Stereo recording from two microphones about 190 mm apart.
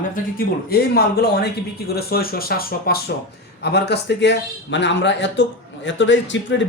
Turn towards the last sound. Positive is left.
turn(degrees=75)  # may be behind; listen again after turning